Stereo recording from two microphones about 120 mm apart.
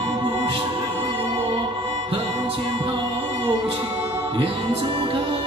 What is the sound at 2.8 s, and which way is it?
Music, 45° right (ahead or behind).